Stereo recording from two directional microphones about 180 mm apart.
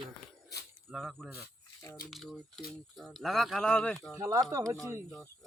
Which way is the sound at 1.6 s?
15° left (ahead or behind).